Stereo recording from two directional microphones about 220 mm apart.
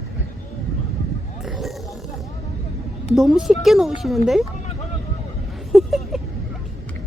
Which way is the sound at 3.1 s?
Centre (ahead or behind).